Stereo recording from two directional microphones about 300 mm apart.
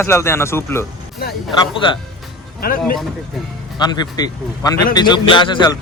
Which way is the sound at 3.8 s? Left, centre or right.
Centre.